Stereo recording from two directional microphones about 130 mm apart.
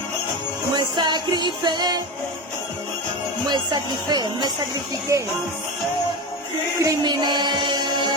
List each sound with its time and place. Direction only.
0.8 s music: 35° right (ahead or behind)
3.5 s speech: 35° right (ahead or behind)
6.8 s music: 35° right (ahead or behind)